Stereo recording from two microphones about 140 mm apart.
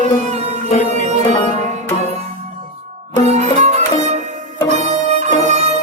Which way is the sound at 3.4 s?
55° right (ahead or behind).